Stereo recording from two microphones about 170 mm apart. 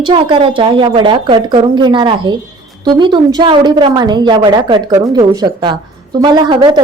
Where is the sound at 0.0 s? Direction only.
30° right (ahead or behind).